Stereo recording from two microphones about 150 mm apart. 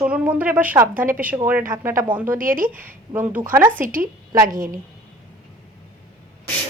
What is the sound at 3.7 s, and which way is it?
Speech, 65° right (ahead or behind).